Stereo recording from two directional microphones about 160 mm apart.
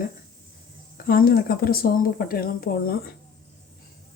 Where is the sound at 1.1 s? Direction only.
65° left (ahead or behind).